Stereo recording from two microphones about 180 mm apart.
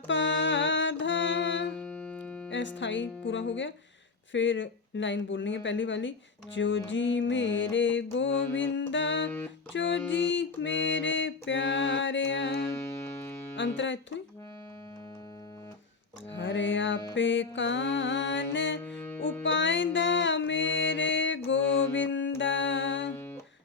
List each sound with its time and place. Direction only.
0.1 s music: 90° left
1.7 s music: 5° left (ahead or behind)
2.5 s speech: 90° left
12.6 s music: 15° left (ahead or behind)
13.6 s speech: 90° left
16.3 s speech: 90° left
18.5 s music: 90° left
18.8 s music: 10° left (ahead or behind)
19.4 s music: 90° left